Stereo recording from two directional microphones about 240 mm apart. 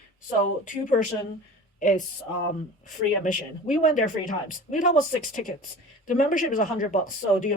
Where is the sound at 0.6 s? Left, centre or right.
Left.